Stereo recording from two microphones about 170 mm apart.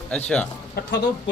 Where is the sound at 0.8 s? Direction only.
65° left (ahead or behind).